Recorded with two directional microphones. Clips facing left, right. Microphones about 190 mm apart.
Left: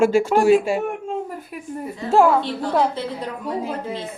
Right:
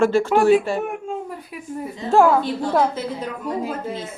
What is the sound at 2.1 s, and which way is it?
Speech, centre (ahead or behind).